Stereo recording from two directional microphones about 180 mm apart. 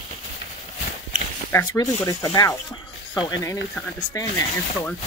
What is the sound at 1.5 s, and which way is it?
Speech, 15° left (ahead or behind).